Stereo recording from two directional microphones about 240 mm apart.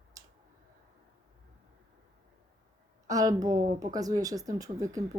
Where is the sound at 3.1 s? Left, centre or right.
Centre.